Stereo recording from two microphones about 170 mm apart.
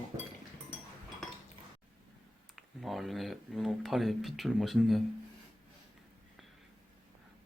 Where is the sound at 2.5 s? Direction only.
Centre (ahead or behind).